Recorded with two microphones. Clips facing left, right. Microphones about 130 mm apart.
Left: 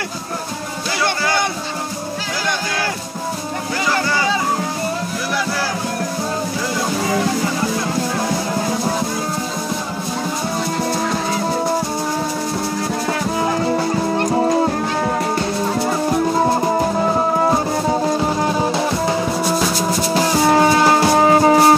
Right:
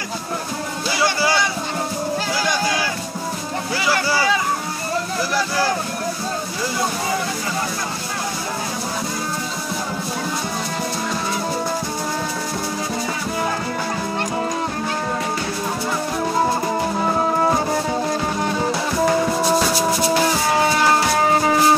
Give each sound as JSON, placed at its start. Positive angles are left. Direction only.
{"t": 20.5, "sound": "music", "side_deg": 35}